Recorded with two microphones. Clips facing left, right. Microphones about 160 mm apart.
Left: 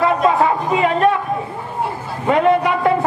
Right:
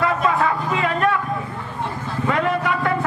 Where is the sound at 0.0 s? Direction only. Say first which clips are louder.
Left 5 dB; 25° left (ahead or behind).